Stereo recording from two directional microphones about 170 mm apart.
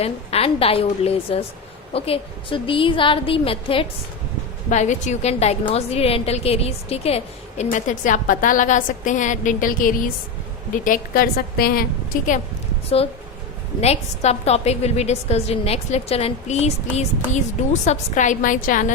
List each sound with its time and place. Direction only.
0.0 s a woman's voice: 35° left (ahead or behind)
4.7 s a woman's voice: 45° left (ahead or behind)
13.8 s a woman's voice: 40° left (ahead or behind)